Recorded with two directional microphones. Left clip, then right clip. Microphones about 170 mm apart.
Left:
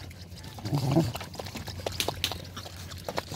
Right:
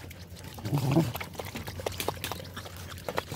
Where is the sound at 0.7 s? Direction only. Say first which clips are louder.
Left 1 dB; 10° right (ahead or behind).